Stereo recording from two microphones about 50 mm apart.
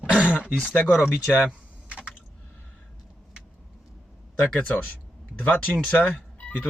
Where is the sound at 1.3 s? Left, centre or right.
Centre.